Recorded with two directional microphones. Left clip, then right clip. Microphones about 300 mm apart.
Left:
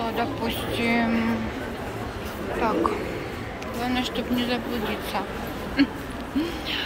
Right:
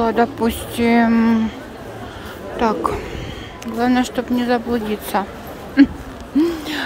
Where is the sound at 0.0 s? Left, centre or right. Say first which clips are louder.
Right 10 dB; right.